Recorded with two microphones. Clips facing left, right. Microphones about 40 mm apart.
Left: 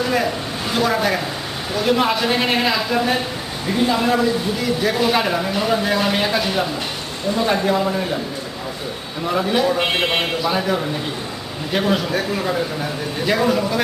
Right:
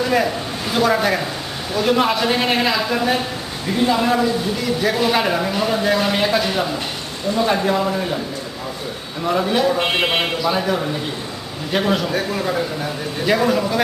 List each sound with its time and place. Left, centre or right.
0.0 s a sound: centre
0.7 s speech: centre
9.2 s speech: centre